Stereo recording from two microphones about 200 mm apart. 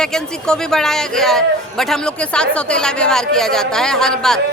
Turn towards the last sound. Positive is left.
turn(degrees=5)  # may be behind; listen again after turning